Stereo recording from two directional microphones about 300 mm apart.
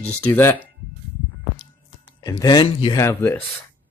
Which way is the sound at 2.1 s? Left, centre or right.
Centre.